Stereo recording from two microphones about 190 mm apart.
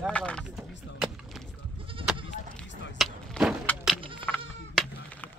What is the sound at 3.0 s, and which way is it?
Vehicle, centre (ahead or behind).